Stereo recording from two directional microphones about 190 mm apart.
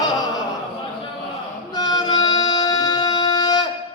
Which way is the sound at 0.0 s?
20° left (ahead or behind).